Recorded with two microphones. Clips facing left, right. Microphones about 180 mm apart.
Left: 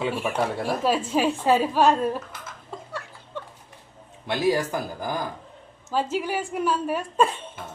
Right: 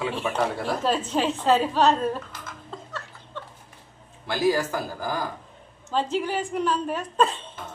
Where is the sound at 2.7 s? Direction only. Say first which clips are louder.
Left 3 dB; 10° left (ahead or behind).